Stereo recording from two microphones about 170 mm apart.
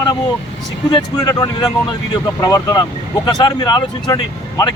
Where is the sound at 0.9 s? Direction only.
20° left (ahead or behind).